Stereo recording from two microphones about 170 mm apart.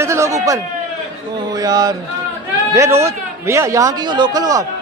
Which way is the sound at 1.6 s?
20° right (ahead or behind).